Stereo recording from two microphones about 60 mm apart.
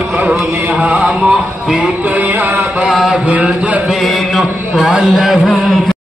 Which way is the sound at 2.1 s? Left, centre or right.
Right.